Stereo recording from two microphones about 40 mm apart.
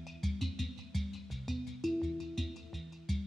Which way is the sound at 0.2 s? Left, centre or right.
Centre.